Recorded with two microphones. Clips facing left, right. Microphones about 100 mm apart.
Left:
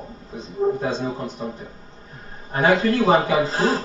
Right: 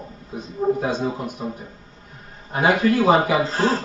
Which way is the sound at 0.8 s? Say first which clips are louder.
Right 1 dB; 10° right (ahead or behind).